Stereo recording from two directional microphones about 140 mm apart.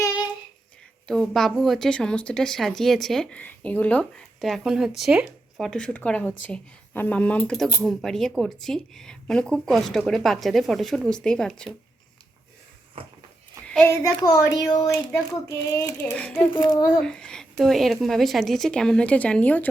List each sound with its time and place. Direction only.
1.0 s speech: 5° left (ahead or behind)
13.7 s a sound: 10° left (ahead or behind)
13.9 s speech: 25° left (ahead or behind)
16.1 s speech: 10° left (ahead or behind)
16.5 s speech: 30° left (ahead or behind)
17.0 s speech: 5° left (ahead or behind)